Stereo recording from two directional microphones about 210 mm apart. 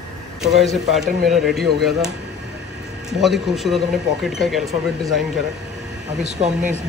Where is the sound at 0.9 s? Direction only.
Centre (ahead or behind).